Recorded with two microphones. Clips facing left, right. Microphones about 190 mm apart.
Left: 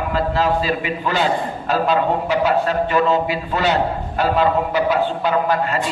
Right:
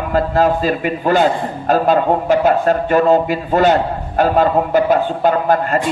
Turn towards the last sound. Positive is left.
turn(degrees=-50)  # may be behind; listen again after turning